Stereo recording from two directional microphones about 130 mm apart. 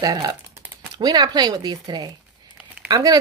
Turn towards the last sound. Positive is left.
turn(degrees=-30)  # may be behind; listen again after turning